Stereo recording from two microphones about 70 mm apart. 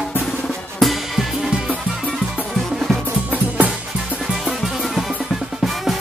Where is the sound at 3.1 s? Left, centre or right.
Right.